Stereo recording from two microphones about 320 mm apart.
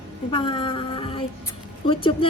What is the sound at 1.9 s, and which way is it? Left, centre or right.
Speech, centre.